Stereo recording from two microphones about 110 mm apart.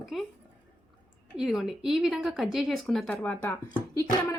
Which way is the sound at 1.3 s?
5° right (ahead or behind).